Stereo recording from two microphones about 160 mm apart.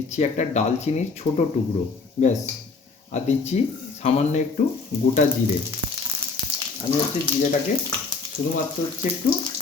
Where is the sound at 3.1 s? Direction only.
45° left (ahead or behind).